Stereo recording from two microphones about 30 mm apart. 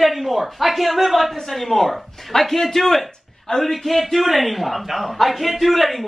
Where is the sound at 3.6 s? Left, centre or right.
Centre.